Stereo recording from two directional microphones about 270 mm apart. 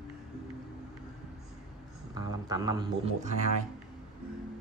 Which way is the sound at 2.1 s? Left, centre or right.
Centre.